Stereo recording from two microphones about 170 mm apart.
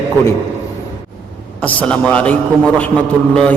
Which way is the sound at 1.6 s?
10° left (ahead or behind).